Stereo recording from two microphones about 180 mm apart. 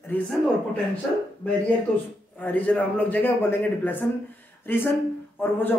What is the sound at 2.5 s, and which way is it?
A man's voice, 10° left (ahead or behind).